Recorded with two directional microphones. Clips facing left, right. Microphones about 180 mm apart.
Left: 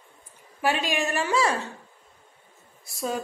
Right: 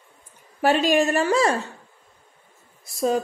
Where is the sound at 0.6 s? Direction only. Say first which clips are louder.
Right 7 dB; 40° right (ahead or behind).